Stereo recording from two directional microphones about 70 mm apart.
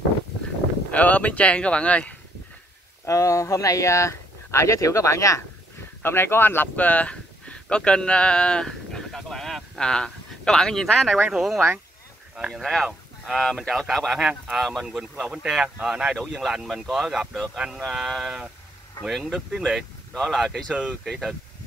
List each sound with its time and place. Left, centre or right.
0.9 s speech: left
3.1 s speech: left
6.0 s speech: left; by 11.1 s centre
11.1 s speech: centre
12.5 s speech: centre